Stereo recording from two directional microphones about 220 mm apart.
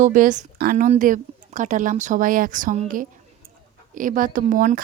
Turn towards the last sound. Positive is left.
turn(degrees=-35)  # may be behind; listen again after turning